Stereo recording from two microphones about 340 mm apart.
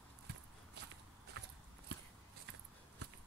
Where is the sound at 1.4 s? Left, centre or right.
Right.